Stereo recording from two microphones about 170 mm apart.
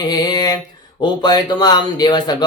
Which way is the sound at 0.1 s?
25° left (ahead or behind).